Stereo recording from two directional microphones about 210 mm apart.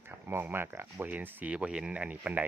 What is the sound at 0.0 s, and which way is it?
Speech, 10° right (ahead or behind).